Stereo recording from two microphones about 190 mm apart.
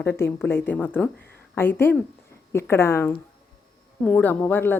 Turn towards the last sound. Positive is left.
turn(degrees=10)  # may be behind; listen again after turning